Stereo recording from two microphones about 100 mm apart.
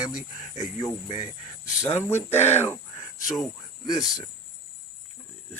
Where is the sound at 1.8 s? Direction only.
25° left (ahead or behind).